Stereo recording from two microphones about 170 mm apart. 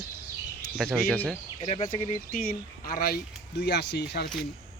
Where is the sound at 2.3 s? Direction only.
55° left (ahead or behind).